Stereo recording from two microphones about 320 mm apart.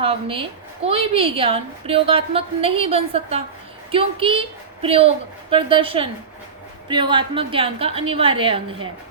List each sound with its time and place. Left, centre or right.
0.0 s a woman's voice: centre